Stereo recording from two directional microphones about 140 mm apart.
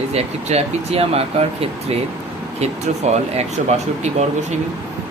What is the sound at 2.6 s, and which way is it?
Speech, 50° right (ahead or behind).